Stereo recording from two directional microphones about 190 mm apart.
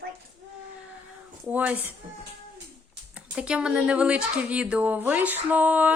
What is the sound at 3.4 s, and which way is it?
A woman's voice, 5° right (ahead or behind).